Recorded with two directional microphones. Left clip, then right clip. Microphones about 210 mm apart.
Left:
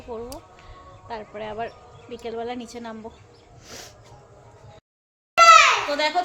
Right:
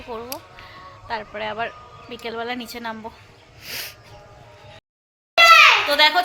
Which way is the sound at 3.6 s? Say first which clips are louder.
Right 9 dB; 15° left (ahead or behind).